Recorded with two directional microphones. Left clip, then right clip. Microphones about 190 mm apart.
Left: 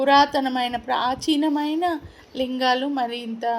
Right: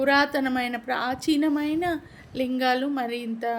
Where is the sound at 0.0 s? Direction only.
15° right (ahead or behind).